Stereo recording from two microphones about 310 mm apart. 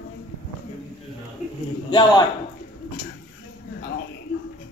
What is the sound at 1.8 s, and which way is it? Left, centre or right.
Speech, centre.